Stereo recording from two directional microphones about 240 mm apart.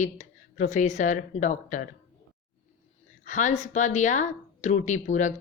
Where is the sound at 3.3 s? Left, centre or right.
Left.